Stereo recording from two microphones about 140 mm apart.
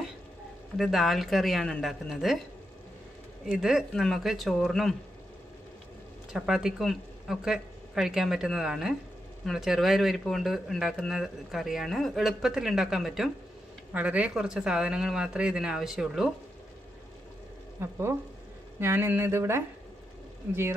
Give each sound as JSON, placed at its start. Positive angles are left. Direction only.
{"t": 0.7, "sound": "speech", "side_deg": 0}
{"t": 3.4, "sound": "speech", "side_deg": -5}
{"t": 6.3, "sound": "speech", "side_deg": -5}
{"t": 17.7, "sound": "speech", "side_deg": -15}